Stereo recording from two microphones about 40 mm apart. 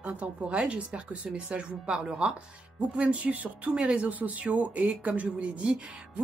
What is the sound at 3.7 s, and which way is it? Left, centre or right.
Speech, right.